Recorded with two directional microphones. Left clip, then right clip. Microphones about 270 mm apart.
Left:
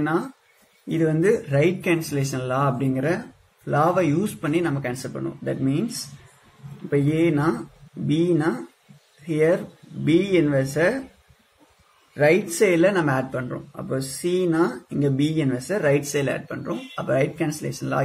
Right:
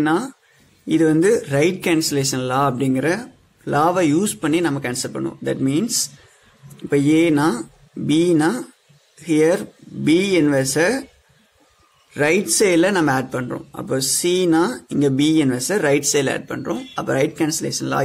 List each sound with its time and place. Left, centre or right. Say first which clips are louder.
0.9 s speech: right 5 dB; right
6.9 s speech: right 5 dB; right
12.1 s speech: right 1 dB; right